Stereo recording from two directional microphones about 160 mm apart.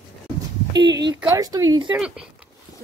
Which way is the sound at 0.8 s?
90° right.